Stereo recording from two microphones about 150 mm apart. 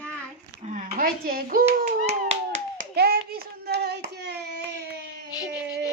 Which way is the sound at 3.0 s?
90° right.